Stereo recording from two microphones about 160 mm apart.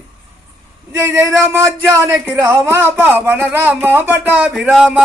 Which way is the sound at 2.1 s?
5° right (ahead or behind).